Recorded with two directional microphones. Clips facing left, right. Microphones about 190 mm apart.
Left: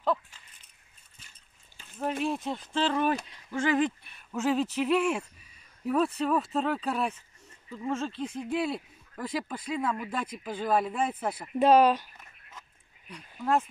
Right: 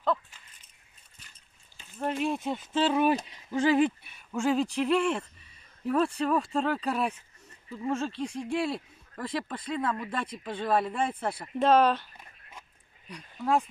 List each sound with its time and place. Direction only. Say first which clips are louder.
2.2 s speech: right 1 dB; centre (ahead or behind); by 3.6 s 20° right (ahead or behind)
3.7 s speech: right 2 dB; 5° right (ahead or behind); by 12.1 s 10° left (ahead or behind)
13.1 s speech: even; centre (ahead or behind)